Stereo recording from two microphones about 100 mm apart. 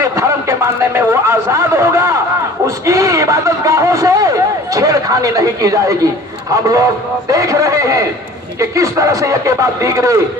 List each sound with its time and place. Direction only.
0.0 s a man's voice: 25° right (ahead or behind)